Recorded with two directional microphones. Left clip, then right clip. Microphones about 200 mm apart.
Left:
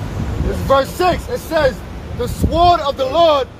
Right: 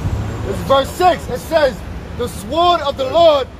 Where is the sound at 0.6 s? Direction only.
15° left (ahead or behind).